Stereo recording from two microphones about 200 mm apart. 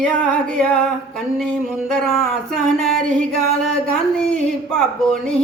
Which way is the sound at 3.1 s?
40° right (ahead or behind).